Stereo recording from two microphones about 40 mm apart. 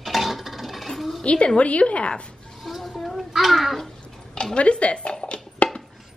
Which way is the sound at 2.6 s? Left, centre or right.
Centre.